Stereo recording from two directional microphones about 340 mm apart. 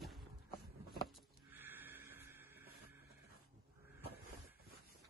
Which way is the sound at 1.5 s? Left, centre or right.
Centre.